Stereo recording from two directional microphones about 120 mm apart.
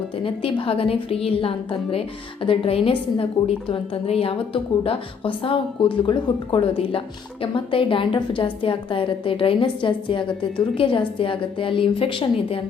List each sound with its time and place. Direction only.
0.2 s a woman's voice: 50° left (ahead or behind)